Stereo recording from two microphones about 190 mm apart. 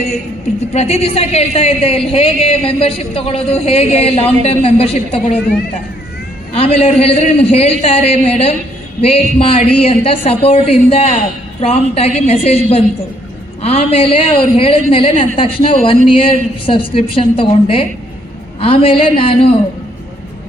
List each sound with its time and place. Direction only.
0.7 s a woman's voice: 35° left (ahead or behind)
6.5 s a woman's voice: 30° left (ahead or behind)
13.6 s a woman's voice: 30° left (ahead or behind)